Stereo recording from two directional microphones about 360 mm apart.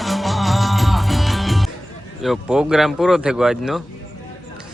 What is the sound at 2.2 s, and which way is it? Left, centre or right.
Speech, centre.